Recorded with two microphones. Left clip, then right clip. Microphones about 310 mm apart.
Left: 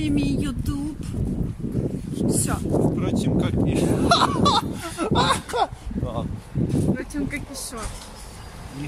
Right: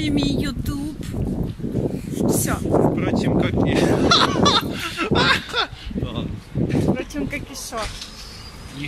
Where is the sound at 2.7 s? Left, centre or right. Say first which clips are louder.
Right 5 dB; right.